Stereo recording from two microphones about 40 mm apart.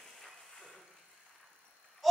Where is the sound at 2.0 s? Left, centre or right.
Centre.